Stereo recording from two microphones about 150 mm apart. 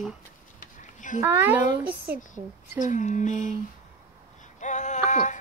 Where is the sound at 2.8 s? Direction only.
55° left (ahead or behind).